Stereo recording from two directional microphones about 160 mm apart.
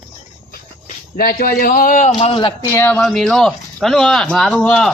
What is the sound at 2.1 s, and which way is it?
Speech, 35° left (ahead or behind).